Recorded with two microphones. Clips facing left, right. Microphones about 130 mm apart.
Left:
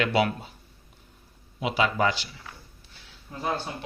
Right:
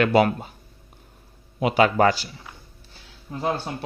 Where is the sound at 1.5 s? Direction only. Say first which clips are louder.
Right 6 dB; 55° right (ahead or behind).